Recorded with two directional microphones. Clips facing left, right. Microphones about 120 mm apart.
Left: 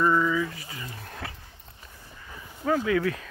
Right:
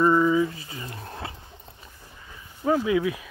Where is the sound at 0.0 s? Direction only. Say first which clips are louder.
Right 4 dB; 25° right (ahead or behind).